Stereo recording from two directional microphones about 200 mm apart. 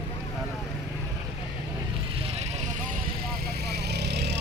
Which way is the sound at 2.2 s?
35° right (ahead or behind).